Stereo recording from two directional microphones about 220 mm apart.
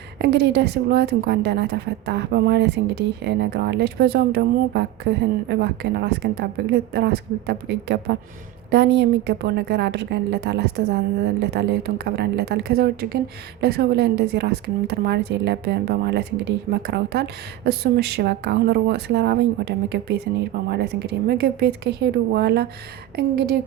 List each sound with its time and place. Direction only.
0.2 s a woman's voice: 50° right (ahead or behind)